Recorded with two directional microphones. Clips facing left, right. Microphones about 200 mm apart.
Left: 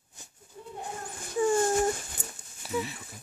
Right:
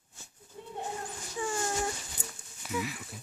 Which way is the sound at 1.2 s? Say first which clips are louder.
Left 10 dB; 50° left (ahead or behind).